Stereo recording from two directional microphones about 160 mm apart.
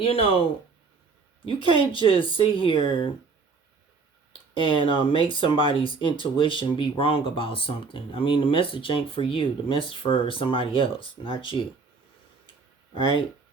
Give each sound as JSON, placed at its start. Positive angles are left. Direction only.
{"t": 0.0, "sound": "speech", "side_deg": 35}
{"t": 4.5, "sound": "speech", "side_deg": 30}
{"t": 12.9, "sound": "speech", "side_deg": 30}